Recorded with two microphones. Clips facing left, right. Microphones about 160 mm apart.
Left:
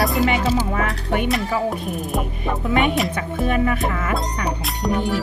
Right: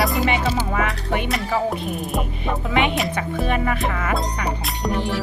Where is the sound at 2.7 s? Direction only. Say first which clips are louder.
Left 2 dB; 45° left (ahead or behind).